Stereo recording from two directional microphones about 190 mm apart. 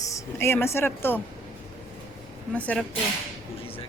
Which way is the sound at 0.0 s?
15° left (ahead or behind).